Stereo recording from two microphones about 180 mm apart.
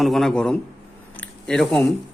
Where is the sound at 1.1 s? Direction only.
5° left (ahead or behind).